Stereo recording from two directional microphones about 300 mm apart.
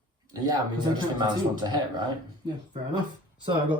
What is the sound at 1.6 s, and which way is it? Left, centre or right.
Speech, centre.